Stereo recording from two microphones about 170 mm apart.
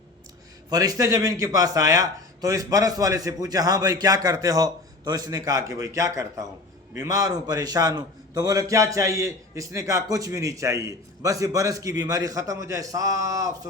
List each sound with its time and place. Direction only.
0.7 s a man's voice: 20° right (ahead or behind)